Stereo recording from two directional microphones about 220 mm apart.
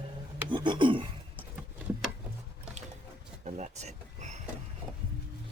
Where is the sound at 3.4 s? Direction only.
30° right (ahead or behind).